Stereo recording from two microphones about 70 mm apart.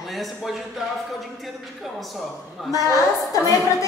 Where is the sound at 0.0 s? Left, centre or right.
Centre.